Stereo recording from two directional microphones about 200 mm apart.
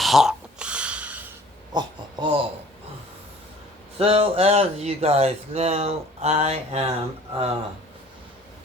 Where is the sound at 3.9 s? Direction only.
30° right (ahead or behind).